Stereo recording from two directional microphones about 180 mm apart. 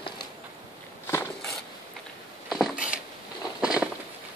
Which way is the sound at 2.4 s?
Centre (ahead or behind).